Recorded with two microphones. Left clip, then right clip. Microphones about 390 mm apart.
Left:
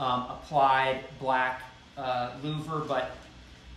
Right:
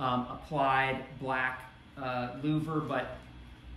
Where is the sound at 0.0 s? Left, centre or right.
Centre.